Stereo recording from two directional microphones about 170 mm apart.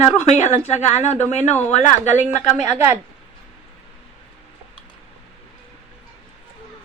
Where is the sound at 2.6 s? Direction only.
10° right (ahead or behind).